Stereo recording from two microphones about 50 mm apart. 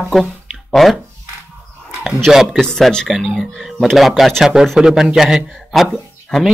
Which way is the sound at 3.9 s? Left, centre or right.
Centre.